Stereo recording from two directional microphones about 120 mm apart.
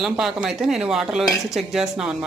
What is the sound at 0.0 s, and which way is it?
Speech, 5° right (ahead or behind).